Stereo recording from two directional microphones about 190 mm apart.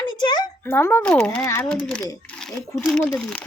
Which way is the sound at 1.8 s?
5° left (ahead or behind).